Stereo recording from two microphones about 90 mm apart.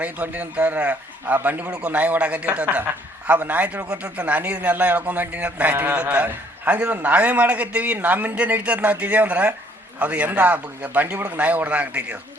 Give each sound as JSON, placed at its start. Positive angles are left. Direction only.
{"t": 0.0, "sound": "a man's voice", "side_deg": -15}